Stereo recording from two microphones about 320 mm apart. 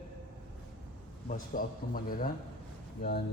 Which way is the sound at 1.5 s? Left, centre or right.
Left.